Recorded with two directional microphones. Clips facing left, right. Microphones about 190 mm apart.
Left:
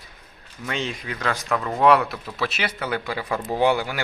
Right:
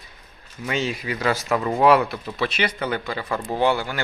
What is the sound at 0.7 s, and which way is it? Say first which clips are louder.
Speech: right 3 dB; 5° right (ahead or behind).